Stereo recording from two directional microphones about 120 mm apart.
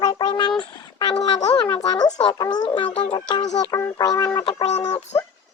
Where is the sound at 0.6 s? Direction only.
40° left (ahead or behind).